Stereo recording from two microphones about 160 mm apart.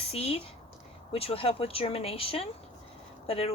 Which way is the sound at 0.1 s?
35° left (ahead or behind).